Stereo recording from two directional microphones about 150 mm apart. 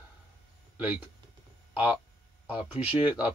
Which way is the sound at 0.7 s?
10° right (ahead or behind).